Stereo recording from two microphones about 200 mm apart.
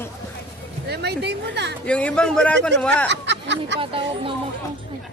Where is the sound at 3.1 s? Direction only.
60° right (ahead or behind).